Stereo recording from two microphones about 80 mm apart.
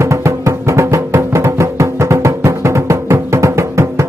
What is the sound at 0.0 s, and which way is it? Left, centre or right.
Music, right.